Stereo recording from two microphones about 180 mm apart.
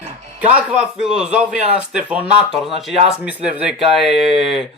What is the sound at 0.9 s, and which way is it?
Speech, 5° right (ahead or behind).